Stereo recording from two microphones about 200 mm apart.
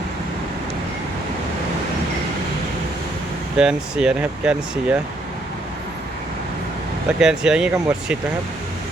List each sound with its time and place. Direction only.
3.6 s speech: 5° right (ahead or behind)
7.2 s speech: 5° right (ahead or behind)